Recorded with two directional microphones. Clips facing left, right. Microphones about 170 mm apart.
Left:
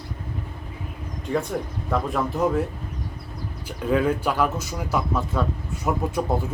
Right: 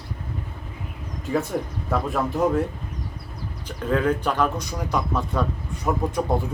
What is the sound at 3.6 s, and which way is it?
Speech, 10° left (ahead or behind).